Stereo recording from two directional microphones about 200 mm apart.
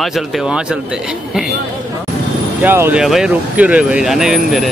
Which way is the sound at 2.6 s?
10° right (ahead or behind).